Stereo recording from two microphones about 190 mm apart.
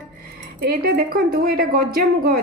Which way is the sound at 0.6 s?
50° right (ahead or behind).